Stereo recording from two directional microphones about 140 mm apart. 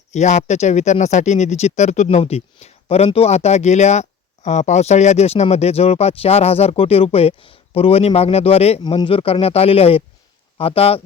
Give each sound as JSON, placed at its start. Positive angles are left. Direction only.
{"t": 0.1, "sound": "speech", "side_deg": 55}